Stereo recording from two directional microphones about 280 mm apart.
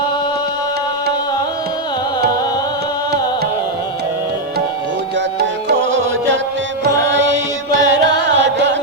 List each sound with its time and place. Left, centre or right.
5.1 s music: right